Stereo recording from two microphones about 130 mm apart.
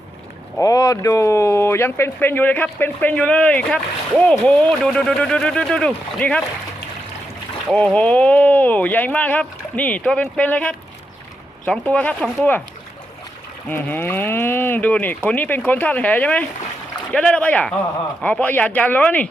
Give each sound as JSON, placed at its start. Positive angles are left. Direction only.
{"t": 0.6, "sound": "speech", "side_deg": 25}
{"t": 7.7, "sound": "speech", "side_deg": 5}
{"t": 13.7, "sound": "speech", "side_deg": 15}